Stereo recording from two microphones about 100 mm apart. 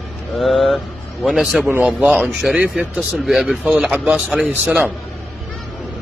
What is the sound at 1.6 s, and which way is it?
Speech, 15° right (ahead or behind).